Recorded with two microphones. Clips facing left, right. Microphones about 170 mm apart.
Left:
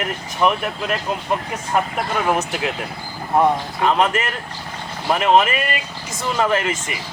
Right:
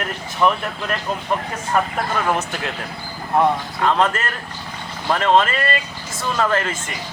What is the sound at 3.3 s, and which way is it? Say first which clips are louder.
Speech: left 1 dB; 15° left (ahead or behind).